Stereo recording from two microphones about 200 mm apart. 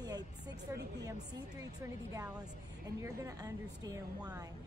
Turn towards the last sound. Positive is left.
turn(degrees=-20)  # may be behind; listen again after turning